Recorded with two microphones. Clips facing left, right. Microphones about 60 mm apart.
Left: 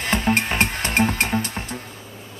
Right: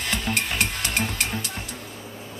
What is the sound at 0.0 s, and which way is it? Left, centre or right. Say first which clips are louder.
Music: left 6 dB; left.